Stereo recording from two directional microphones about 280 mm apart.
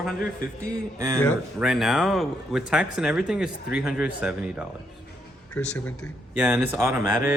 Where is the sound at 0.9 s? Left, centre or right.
Centre.